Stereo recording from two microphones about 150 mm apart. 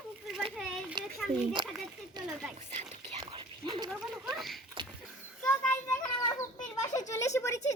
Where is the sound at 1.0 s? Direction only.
30° right (ahead or behind).